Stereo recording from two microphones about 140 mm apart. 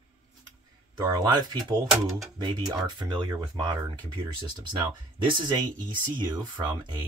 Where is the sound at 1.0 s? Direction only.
30° right (ahead or behind).